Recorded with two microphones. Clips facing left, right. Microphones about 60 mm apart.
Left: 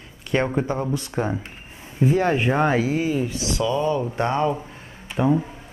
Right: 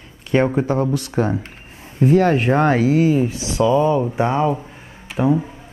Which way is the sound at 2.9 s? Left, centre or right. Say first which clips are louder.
Right 7 dB; right.